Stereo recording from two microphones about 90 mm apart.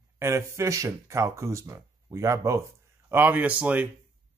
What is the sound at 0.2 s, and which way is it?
Speech, 35° right (ahead or behind).